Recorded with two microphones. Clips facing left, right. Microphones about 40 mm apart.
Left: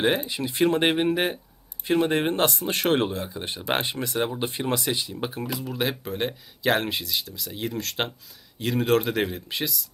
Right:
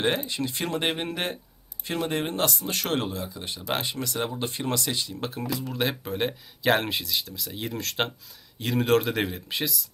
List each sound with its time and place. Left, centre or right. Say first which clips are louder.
0.0 s speech: left 2 dB; centre